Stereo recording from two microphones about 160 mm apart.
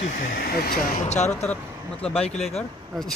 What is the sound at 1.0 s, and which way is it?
Speech, 45° left (ahead or behind).